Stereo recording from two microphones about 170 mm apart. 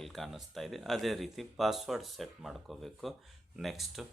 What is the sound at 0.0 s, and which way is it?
Speech, centre (ahead or behind).